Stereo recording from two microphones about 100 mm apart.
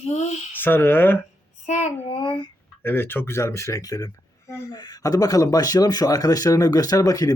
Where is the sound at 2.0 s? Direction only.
55° left (ahead or behind).